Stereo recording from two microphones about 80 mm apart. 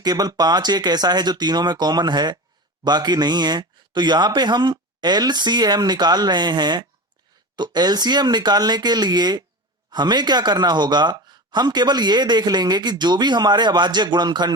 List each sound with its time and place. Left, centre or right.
0.0 s speech: right